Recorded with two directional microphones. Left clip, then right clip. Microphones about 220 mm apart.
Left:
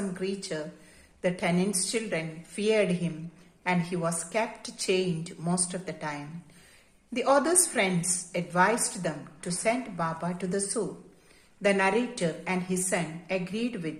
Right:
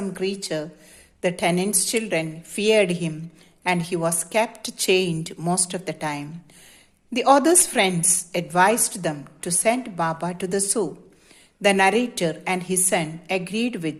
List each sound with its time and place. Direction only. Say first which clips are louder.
0.1 s a woman's voice: right 7 dB; 45° right (ahead or behind)